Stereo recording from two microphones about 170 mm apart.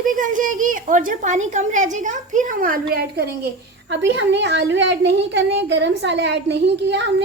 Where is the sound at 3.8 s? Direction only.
90° right.